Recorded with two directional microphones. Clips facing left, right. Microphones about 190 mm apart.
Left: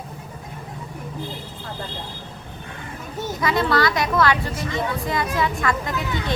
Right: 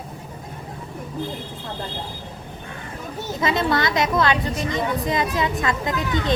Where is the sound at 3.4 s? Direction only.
20° right (ahead or behind).